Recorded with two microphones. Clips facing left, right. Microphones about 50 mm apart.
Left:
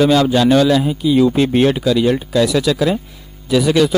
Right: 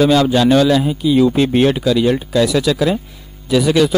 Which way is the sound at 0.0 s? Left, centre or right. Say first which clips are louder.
Even; centre.